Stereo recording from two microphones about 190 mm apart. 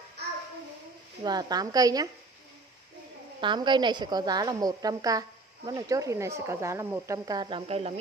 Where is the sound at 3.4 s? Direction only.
25° right (ahead or behind).